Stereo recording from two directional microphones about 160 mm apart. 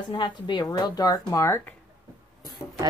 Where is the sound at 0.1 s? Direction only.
30° left (ahead or behind).